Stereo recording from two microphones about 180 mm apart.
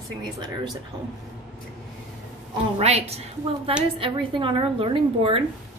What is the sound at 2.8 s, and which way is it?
A woman's voice, 35° right (ahead or behind).